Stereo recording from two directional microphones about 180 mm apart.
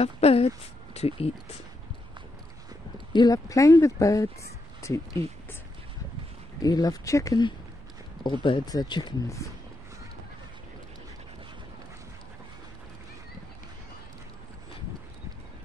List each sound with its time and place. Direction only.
0.0 s speech: 35° left (ahead or behind)
3.1 s speech: 25° left (ahead or behind)
6.6 s speech: 20° left (ahead or behind)